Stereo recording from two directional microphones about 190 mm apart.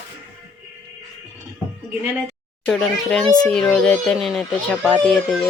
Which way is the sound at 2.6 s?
Centre (ahead or behind).